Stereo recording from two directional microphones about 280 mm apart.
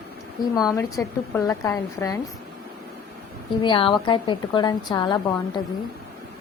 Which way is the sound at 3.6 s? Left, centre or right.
Centre.